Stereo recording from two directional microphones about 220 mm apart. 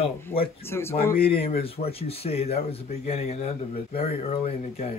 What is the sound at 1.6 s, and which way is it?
Speech, 25° left (ahead or behind).